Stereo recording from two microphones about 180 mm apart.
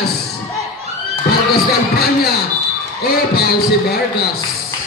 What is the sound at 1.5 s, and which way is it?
Heart sounds, 60° left (ahead or behind).